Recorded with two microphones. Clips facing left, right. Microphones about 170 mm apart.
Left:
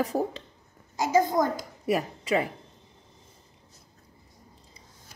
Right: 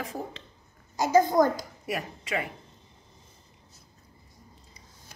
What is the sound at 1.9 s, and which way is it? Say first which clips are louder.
Speech: left 6 dB; 35° left (ahead or behind).